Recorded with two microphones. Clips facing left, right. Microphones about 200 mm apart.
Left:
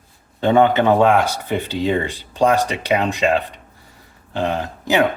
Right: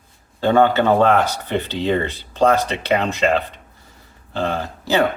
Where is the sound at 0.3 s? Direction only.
20° left (ahead or behind).